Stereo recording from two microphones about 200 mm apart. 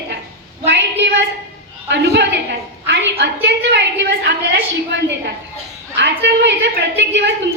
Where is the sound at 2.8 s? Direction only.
65° right (ahead or behind).